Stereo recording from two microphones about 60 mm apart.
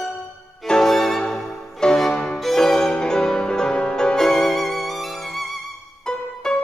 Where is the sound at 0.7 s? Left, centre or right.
Centre.